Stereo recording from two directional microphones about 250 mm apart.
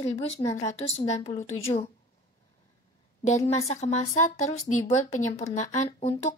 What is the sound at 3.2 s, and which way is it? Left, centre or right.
A woman's voice, left.